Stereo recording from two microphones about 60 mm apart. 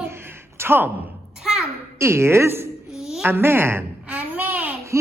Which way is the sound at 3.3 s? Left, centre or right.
Right.